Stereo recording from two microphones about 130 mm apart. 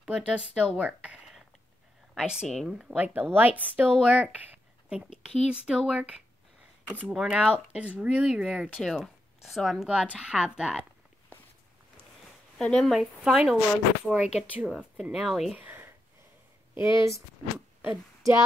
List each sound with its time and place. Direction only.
0.0 s a woman's voice: 5° right (ahead or behind)
12.5 s a woman's voice: 5° left (ahead or behind)
15.5 s a sound: 15° right (ahead or behind)
16.7 s speech: 20° right (ahead or behind)